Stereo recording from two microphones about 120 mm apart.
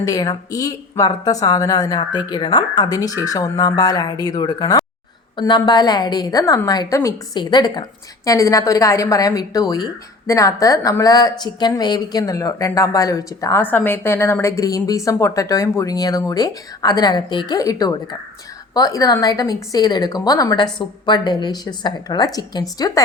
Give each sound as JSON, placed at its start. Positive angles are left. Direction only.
{"t": 0.0, "sound": "a woman's voice", "side_deg": 30}
{"t": 13.6, "sound": "a woman's voice", "side_deg": 15}